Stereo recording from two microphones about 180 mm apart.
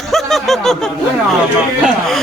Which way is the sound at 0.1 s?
Centre (ahead or behind).